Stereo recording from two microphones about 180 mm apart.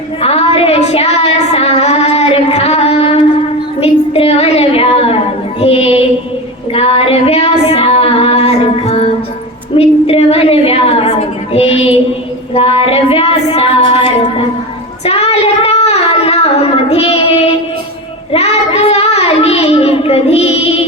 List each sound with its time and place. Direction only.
0.2 s child singing: 30° left (ahead or behind)
3.8 s a sound: 35° left (ahead or behind)
5.5 s child singing: 35° left (ahead or behind)
6.7 s female singing: 35° left (ahead or behind)
9.7 s a sound: 35° left (ahead or behind)
12.5 s music: 30° left (ahead or behind)
15.0 s child singing: 35° left (ahead or behind)